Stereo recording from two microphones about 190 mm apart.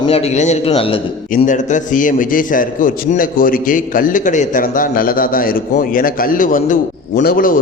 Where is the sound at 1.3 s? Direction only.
40° left (ahead or behind).